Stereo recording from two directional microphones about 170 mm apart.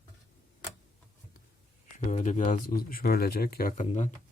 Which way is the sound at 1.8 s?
45° left (ahead or behind).